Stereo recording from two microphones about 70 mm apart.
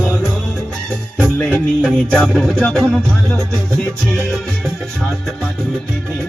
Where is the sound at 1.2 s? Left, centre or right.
Left.